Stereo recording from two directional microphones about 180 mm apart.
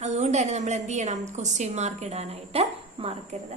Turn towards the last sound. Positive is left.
turn(degrees=-35)  # may be behind; listen again after turning